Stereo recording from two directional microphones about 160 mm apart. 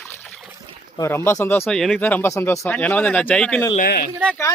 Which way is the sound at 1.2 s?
15° left (ahead or behind).